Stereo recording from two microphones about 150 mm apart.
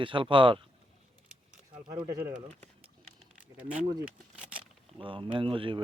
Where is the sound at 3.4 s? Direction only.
10° right (ahead or behind).